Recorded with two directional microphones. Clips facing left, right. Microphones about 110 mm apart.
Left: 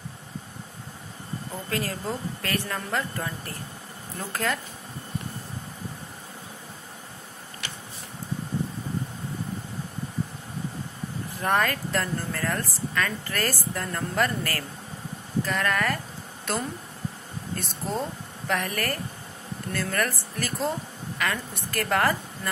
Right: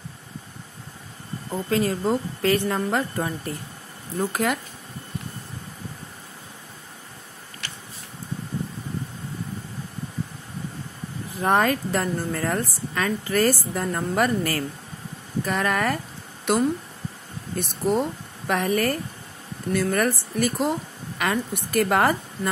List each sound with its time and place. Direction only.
1.5 s a woman's voice: 20° right (ahead or behind)
11.2 s speech: 20° right (ahead or behind)
17.6 s a woman's voice: 15° right (ahead or behind)